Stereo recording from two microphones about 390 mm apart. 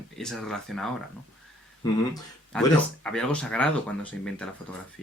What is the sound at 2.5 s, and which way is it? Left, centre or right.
Speech, centre.